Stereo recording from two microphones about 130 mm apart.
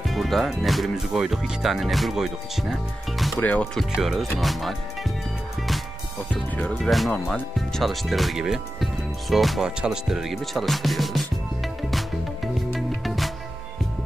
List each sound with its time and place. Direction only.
0.1 s speech: centre (ahead or behind)
3.3 s speech: 10° left (ahead or behind)
3.9 s speech: centre (ahead or behind)
6.3 s speech: 10° left (ahead or behind)
12.7 s music: centre (ahead or behind)